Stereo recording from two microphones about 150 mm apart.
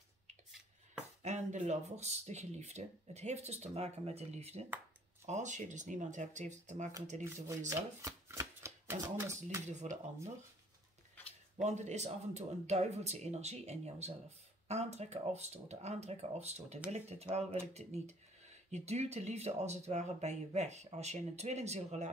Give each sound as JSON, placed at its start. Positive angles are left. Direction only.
{"t": 0.5, "sound": "a sound", "side_deg": 0}
{"t": 1.2, "sound": "speech", "side_deg": -50}
{"t": 8.0, "sound": "shuffling cards", "side_deg": -20}
{"t": 9.1, "sound": "speech", "side_deg": -15}
{"t": 9.7, "sound": "speech", "side_deg": -50}
{"t": 11.5, "sound": "speech", "side_deg": -50}